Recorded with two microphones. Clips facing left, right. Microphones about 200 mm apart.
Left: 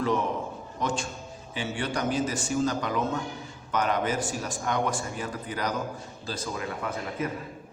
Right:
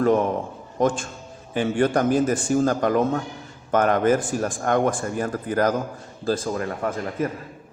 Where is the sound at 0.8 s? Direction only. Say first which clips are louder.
Right 9 dB; 50° right (ahead or behind).